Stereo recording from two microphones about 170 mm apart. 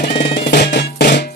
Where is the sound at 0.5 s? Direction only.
70° left (ahead or behind).